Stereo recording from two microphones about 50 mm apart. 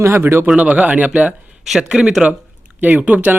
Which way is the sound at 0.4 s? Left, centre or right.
Right.